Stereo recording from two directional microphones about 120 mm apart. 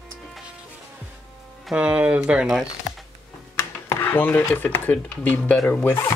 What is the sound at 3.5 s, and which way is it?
Speech, 20° left (ahead or behind).